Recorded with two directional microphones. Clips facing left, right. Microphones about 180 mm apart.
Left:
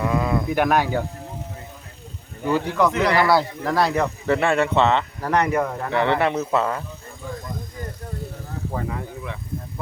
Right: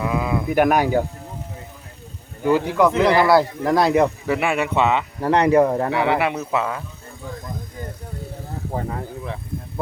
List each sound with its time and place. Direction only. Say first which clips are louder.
0.0 s speech: even; 5° right (ahead or behind)
2.4 s speech: right 3 dB; 5° right (ahead or behind)
2.9 s speech: right 4 dB; 25° right (ahead or behind)
5.2 s speech: right 8 dB; 30° right (ahead or behind)
5.9 s speech: even; 5° right (ahead or behind)
8.7 s speech: right 2 dB; 35° right (ahead or behind)